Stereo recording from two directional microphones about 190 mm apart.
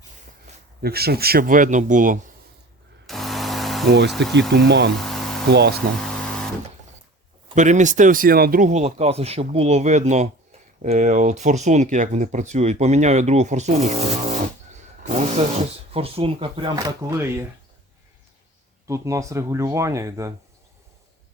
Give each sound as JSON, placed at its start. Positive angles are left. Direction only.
{"t": 0.8, "sound": "speech", "side_deg": -55}
{"t": 3.1, "sound": "a sound", "side_deg": 0}
{"t": 3.8, "sound": "speech", "side_deg": -65}
{"t": 4.9, "sound": "a sound", "side_deg": 0}
{"t": 5.5, "sound": "speech", "side_deg": -60}
{"t": 6.0, "sound": "a sound", "side_deg": 5}
{"t": 7.5, "sound": "speech", "side_deg": -40}
{"t": 15.5, "sound": "speech", "side_deg": -30}
{"t": 18.9, "sound": "speech", "side_deg": -15}